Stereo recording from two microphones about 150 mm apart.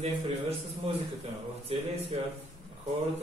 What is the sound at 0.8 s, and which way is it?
A man's voice, 40° right (ahead or behind).